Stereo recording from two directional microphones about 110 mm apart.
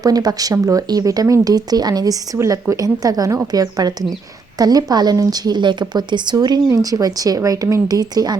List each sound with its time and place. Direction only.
0.0 s speech: 35° right (ahead or behind)